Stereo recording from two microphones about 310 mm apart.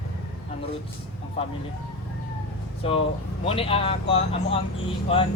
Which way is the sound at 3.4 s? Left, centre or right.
Centre.